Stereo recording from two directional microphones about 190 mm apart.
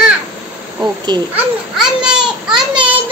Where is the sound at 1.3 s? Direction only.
5° right (ahead or behind).